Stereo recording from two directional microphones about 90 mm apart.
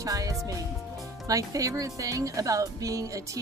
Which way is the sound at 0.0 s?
40° right (ahead or behind).